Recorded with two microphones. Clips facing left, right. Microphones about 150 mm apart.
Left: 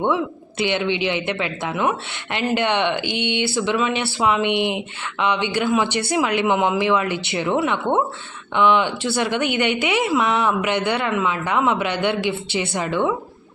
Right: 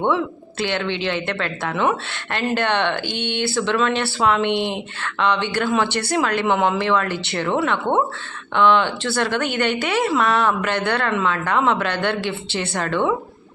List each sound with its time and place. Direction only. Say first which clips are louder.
0.6 s speech: left 2 dB; 15° left (ahead or behind)
2.6 s speech: left 1 dB; 15° left (ahead or behind)